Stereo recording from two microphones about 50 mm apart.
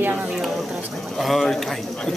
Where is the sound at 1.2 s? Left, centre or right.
Centre.